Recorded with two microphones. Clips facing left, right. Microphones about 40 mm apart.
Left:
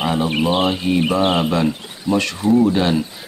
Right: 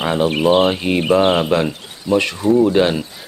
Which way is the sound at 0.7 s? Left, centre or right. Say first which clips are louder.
Right 1 dB; right.